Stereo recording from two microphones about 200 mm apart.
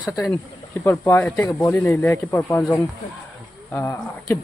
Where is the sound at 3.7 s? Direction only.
10° left (ahead or behind).